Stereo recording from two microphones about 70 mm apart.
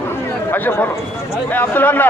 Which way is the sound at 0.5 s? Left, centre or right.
Left.